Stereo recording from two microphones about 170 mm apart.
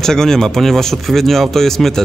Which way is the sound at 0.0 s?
5° left (ahead or behind).